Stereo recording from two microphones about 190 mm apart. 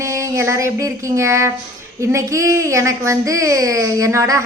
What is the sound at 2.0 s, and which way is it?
A woman's voice, 15° right (ahead or behind).